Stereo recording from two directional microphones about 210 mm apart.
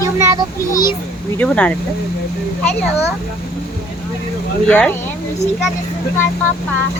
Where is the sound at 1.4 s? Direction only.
5° left (ahead or behind).